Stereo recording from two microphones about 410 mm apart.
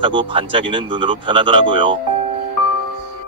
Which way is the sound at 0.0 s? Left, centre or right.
Centre.